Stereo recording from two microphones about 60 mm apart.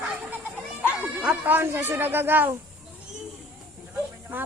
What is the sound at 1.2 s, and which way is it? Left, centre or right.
Speech, right.